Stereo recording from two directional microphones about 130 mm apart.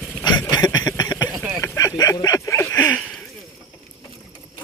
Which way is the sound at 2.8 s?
10° left (ahead or behind).